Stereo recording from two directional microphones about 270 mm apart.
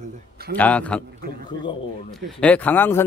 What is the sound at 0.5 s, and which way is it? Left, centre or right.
Speech, centre.